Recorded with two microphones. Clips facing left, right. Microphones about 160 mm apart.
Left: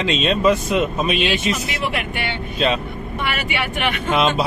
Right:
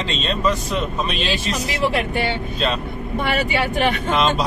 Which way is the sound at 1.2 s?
35° right (ahead or behind).